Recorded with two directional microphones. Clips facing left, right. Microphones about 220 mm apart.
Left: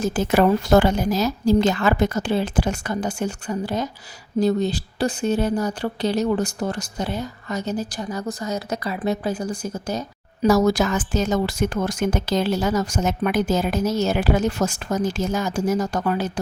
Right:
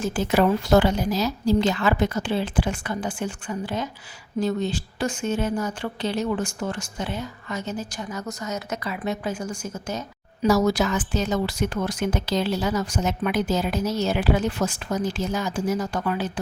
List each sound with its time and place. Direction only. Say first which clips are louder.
0.0 s a woman's voice: left 3 dB; 45° left (ahead or behind)
10.4 s speech: left 3 dB; 45° left (ahead or behind)